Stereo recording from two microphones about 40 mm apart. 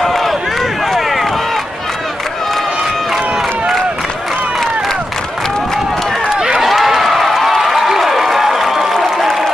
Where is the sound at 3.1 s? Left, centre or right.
Centre.